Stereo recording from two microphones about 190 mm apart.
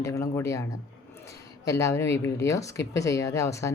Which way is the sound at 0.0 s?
15° left (ahead or behind).